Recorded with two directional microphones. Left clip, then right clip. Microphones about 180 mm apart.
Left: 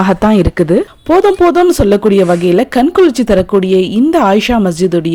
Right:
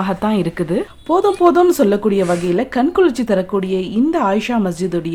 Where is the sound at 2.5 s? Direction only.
30° left (ahead or behind).